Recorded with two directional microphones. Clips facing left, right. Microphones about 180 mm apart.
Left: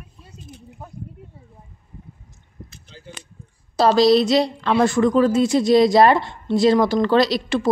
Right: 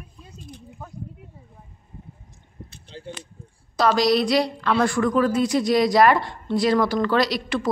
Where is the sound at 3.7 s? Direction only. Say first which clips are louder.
Left 5 dB; 30° left (ahead or behind).